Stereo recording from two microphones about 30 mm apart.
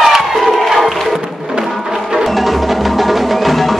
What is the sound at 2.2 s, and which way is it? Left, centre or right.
Music, centre.